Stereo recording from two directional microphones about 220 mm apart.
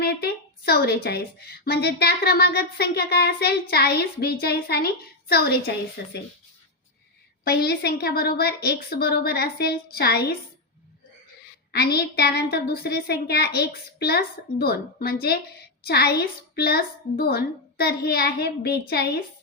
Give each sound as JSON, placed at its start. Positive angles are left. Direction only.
{"t": 0.0, "sound": "a woman's voice", "side_deg": 45}
{"t": 7.4, "sound": "a woman's voice", "side_deg": 45}
{"t": 11.7, "sound": "a woman's voice", "side_deg": 45}